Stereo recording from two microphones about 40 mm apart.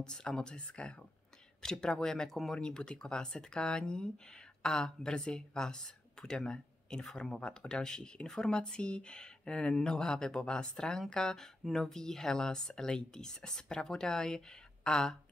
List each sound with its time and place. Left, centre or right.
0.0 s speech: centre
2.6 s speech: left